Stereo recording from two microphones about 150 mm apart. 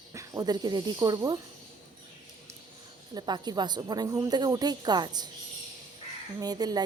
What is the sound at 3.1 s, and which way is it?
A woman's voice, 30° right (ahead or behind).